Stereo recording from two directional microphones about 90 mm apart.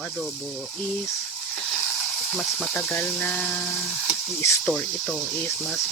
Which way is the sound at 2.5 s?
5° left (ahead or behind).